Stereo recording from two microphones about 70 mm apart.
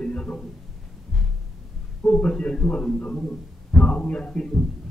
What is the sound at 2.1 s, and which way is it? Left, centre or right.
Speech, centre.